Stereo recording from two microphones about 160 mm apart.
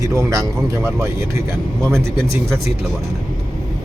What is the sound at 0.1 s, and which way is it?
A man's voice, 20° right (ahead or behind).